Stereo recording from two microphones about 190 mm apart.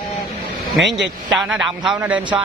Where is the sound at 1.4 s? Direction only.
5° right (ahead or behind).